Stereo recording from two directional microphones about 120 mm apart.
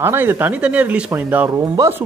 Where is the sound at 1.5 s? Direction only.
25° right (ahead or behind).